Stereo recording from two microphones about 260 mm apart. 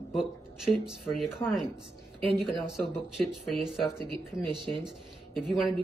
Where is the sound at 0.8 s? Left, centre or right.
Centre.